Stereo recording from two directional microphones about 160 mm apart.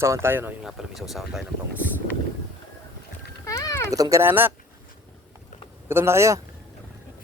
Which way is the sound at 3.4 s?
20° left (ahead or behind).